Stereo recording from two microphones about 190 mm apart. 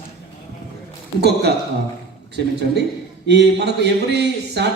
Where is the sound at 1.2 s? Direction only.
60° right (ahead or behind).